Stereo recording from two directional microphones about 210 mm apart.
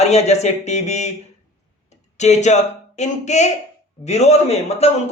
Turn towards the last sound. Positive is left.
turn(degrees=30)  # may be behind; listen again after turning